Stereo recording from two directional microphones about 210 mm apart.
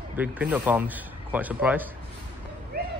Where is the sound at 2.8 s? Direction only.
50° right (ahead or behind).